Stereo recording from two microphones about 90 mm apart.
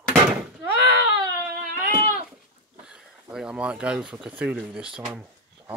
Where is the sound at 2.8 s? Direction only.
10° right (ahead or behind).